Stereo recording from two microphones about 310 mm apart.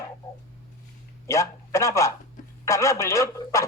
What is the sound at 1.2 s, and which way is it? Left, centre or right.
A man's voice, centre.